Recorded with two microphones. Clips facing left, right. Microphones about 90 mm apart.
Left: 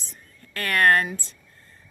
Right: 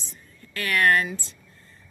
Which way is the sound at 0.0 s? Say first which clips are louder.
Right 1 dB; 45° left (ahead or behind).